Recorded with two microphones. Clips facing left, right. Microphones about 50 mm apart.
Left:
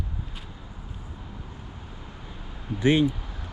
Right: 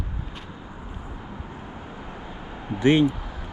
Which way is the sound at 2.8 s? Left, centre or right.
Right.